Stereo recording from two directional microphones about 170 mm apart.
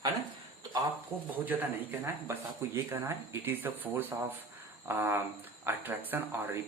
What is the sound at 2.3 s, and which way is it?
Speech, 15° right (ahead or behind).